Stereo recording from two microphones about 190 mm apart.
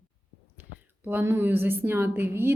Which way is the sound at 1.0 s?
10° right (ahead or behind).